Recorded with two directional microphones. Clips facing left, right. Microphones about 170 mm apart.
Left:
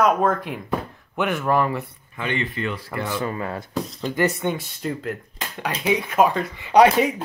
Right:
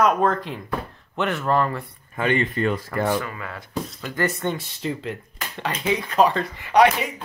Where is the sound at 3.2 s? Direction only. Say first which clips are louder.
Left 7 dB; 30° left (ahead or behind).